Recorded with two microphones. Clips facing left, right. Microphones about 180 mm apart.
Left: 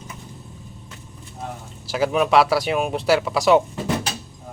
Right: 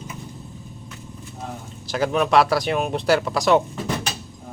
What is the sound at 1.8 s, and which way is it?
Speech, 5° left (ahead or behind).